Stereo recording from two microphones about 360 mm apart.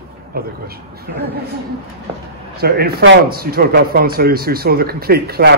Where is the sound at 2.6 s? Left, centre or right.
Right.